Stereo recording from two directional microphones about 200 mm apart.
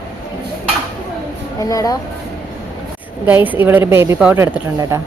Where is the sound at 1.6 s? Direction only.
15° left (ahead or behind).